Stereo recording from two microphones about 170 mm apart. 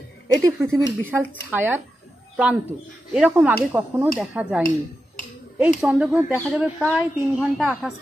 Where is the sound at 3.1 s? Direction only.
5° right (ahead or behind).